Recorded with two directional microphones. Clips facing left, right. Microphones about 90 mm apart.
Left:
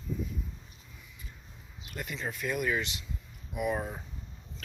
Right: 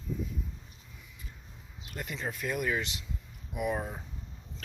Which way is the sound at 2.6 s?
25° right (ahead or behind).